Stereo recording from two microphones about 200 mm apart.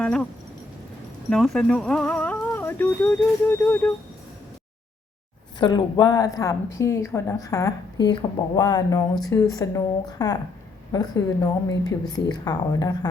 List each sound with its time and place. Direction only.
0.0 s a sound: 5° left (ahead or behind)
1.3 s speech: centre (ahead or behind)
5.5 s a woman's voice: 20° left (ahead or behind)